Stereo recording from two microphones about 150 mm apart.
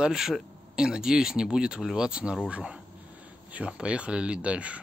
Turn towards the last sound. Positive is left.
turn(degrees=-10)  # may be behind; listen again after turning